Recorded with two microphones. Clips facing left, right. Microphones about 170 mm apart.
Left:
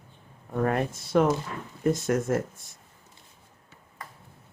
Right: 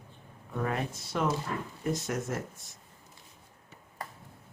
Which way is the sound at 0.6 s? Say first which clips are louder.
Left 6 dB; 50° left (ahead or behind).